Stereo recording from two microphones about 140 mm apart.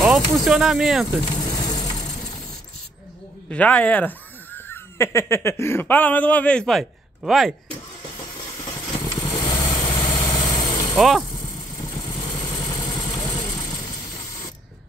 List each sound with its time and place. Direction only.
0.0 s speech: centre (ahead or behind)
1.2 s ratchet: 30° left (ahead or behind)
3.4 s speech: 10° left (ahead or behind)
8.9 s vehicle: 25° left (ahead or behind)
11.0 s speech: centre (ahead or behind)
11.3 s vehicle: 30° left (ahead or behind)